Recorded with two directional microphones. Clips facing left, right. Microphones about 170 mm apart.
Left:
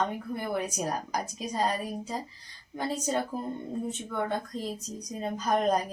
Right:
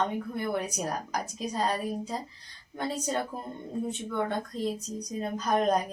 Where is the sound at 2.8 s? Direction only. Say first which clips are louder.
Left 1 dB; 5° left (ahead or behind).